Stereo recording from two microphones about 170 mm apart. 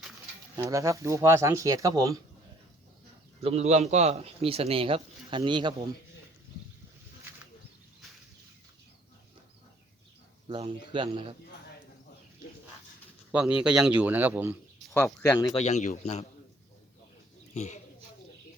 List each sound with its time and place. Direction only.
0.5 s speech: 20° right (ahead or behind)
3.4 s a man's voice: 40° right (ahead or behind)
10.9 s a man's voice: 30° right (ahead or behind)
13.3 s a man's voice: 5° right (ahead or behind)
14.8 s speech: 5° left (ahead or behind)
15.5 s a man's voice: 40° left (ahead or behind)
17.5 s speech: 45° left (ahead or behind)